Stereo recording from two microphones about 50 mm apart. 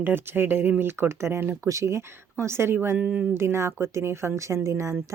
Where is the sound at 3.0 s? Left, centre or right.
Right.